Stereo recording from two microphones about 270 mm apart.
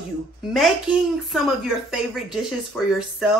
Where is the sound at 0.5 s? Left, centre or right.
Centre.